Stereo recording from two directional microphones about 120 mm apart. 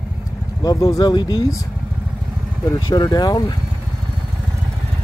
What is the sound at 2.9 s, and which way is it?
Speech, 35° left (ahead or behind).